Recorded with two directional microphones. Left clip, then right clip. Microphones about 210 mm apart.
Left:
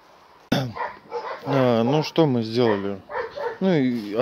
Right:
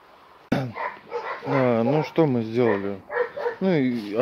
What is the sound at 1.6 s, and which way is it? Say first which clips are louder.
Speech: left 2 dB; 20° left (ahead or behind).